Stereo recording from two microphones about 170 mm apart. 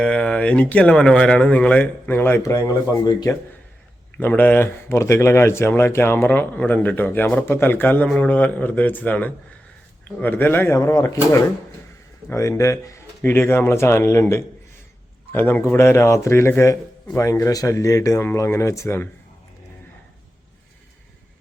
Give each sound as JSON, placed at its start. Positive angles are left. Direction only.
{"t": 0.0, "sound": "speech", "side_deg": 5}
{"t": 4.2, "sound": "speech", "side_deg": 10}